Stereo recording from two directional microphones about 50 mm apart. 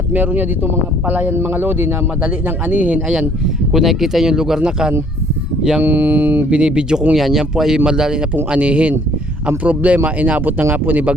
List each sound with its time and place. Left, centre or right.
0.1 s speech: right
1.3 s speech: right
2.2 s speech: right
3.7 s speech: centre
5.8 s speech: right
6.5 s speech: right
7.1 s speech: centre
8.4 s speech: right